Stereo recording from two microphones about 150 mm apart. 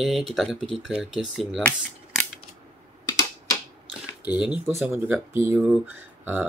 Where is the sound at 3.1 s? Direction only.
25° left (ahead or behind).